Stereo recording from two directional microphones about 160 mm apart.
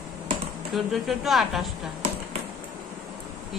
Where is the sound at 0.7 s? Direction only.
Centre (ahead or behind).